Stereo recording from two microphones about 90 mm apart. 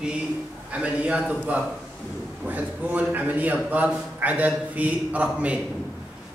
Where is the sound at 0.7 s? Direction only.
15° right (ahead or behind).